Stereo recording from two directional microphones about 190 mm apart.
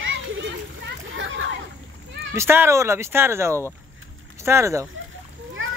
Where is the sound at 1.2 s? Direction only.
90° right.